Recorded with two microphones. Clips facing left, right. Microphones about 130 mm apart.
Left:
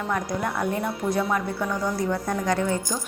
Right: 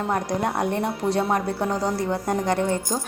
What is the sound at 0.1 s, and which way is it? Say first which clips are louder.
A woman's voice: right 2 dB; 35° right (ahead or behind).